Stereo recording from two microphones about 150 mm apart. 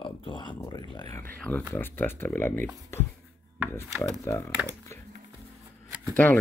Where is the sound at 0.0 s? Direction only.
30° left (ahead or behind).